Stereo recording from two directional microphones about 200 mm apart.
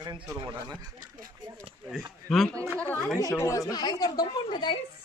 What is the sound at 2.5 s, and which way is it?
Speech, 10° right (ahead or behind).